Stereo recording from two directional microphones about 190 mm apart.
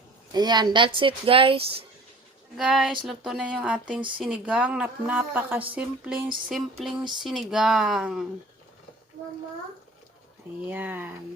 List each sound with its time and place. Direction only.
0.3 s speech: 20° right (ahead or behind)
2.6 s a woman's voice: centre (ahead or behind)
10.7 s a woman's voice: 10° right (ahead or behind)